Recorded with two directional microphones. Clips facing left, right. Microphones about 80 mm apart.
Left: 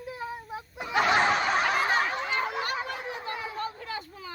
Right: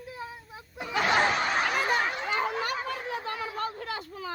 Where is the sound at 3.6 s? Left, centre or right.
Right.